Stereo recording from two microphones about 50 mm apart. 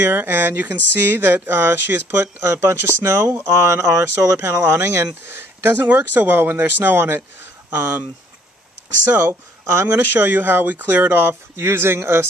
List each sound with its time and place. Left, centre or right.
0.0 s speech: right
2.5 s speech: right
3.0 s speech: right
3.4 s speech: right
4.2 s speech: right
5.0 s speech: right
5.9 s speech: right
9.3 s speech: right
10.1 s speech: right
11.1 s speech: right